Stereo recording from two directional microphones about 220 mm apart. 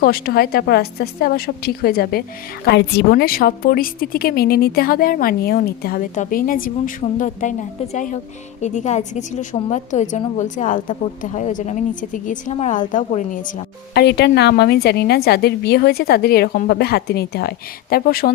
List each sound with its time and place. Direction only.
0.0 s a woman's voice: 45° left (ahead or behind)